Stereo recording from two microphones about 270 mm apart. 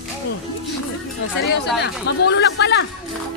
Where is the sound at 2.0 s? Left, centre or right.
Left.